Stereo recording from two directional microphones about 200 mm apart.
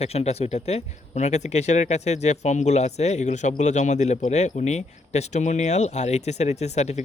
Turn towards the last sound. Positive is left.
turn(degrees=35)  # may be behind; listen again after turning